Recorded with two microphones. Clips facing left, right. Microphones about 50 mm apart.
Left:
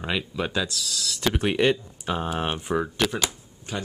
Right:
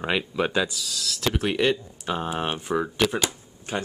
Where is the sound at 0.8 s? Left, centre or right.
Centre.